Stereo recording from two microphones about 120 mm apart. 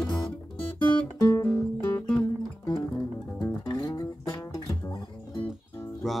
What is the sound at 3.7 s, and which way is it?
Music, 30° left (ahead or behind).